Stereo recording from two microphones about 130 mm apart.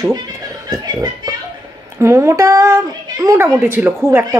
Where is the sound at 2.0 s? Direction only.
20° right (ahead or behind).